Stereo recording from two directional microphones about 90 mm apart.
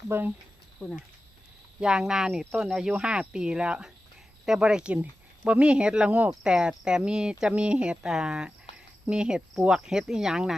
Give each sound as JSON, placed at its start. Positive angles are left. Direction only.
{"t": 0.1, "sound": "speech", "side_deg": -25}
{"t": 0.8, "sound": "speech", "side_deg": 10}
{"t": 1.8, "sound": "speech", "side_deg": -10}